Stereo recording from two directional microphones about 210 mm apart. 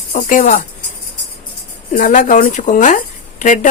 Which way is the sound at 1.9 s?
40° left (ahead or behind).